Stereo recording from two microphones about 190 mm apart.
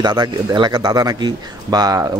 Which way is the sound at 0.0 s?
20° right (ahead or behind).